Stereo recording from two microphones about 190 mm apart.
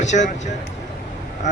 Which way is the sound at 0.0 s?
40° left (ahead or behind).